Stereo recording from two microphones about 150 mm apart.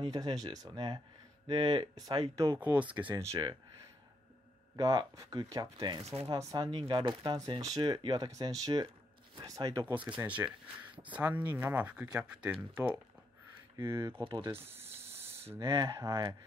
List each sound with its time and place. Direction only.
0.0 s speech: 25° right (ahead or behind)
2.3 s speech: 20° right (ahead or behind)
4.7 s speech: 25° right (ahead or behind)
14.5 s speech: 15° right (ahead or behind)